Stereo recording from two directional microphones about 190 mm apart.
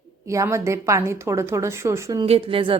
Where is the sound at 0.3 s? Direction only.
15° right (ahead or behind).